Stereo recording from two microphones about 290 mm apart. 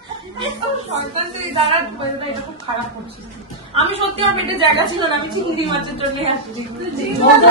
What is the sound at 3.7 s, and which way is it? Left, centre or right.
A woman's voice, centre.